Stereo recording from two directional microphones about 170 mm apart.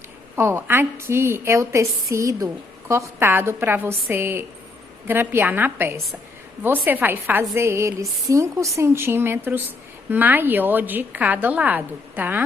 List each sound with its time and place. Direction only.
0.3 s a woman's voice: 15° right (ahead or behind)